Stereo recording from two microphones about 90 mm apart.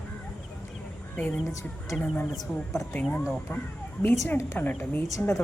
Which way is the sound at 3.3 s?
20° left (ahead or behind).